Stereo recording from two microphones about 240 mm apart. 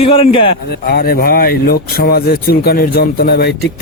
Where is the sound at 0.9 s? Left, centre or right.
Left.